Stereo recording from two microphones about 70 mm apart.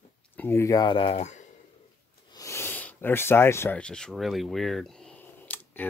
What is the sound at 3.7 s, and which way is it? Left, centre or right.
Speech, centre.